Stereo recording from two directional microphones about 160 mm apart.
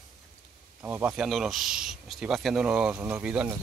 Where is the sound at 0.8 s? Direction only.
10° right (ahead or behind).